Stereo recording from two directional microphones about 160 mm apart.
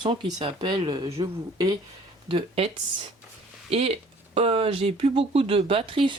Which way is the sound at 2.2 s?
35° right (ahead or behind).